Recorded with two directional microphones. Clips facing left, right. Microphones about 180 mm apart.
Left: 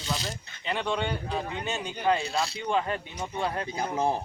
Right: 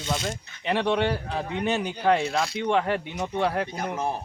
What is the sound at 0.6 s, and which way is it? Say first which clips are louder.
Speech: right 6 dB; 70° right (ahead or behind).